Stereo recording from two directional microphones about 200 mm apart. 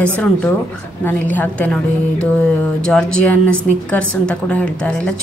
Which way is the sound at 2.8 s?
5° left (ahead or behind).